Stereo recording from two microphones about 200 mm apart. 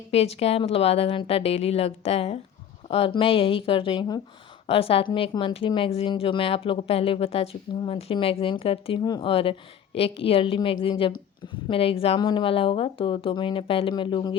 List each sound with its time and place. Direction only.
0.1 s speech: 30° left (ahead or behind)